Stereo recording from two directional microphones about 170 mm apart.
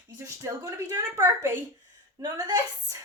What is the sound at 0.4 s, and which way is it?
A woman's voice, 20° right (ahead or behind).